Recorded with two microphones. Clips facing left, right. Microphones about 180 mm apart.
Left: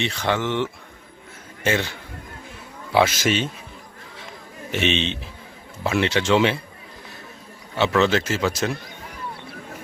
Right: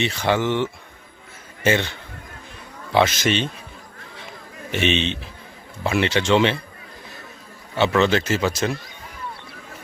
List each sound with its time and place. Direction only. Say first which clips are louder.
0.0 s speech: right 3 dB; 5° right (ahead or behind)
2.9 s a man's voice: even; 5° left (ahead or behind)
4.7 s speech: right 1 dB; centre (ahead or behind)
7.8 s speech: right 1 dB; centre (ahead or behind)